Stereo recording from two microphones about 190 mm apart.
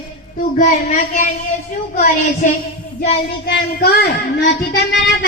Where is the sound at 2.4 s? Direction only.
45° left (ahead or behind).